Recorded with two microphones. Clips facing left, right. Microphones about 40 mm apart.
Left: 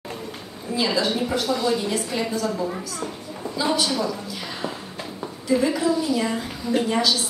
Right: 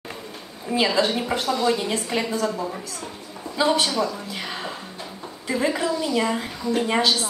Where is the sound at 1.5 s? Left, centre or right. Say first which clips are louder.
Right 2 dB; centre.